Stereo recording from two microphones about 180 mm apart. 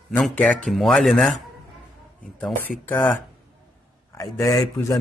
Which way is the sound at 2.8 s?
10° left (ahead or behind).